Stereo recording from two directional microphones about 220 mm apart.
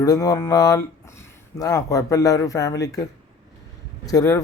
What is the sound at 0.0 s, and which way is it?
Speech, 15° left (ahead or behind).